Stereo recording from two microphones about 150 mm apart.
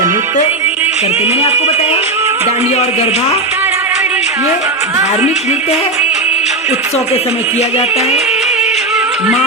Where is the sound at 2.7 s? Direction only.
45° left (ahead or behind).